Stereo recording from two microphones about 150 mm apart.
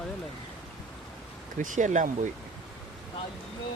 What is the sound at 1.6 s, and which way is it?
Speech, 55° right (ahead or behind).